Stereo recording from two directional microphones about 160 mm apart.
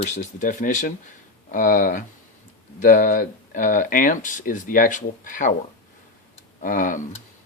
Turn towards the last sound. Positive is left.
turn(degrees=55)  # may be behind; listen again after turning